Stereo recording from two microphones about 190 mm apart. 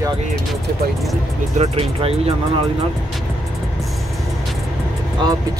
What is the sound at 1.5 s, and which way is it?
Speech, 30° right (ahead or behind).